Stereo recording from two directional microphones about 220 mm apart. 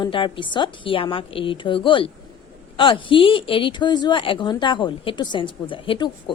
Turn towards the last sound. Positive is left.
turn(degrees=20)  # may be behind; listen again after turning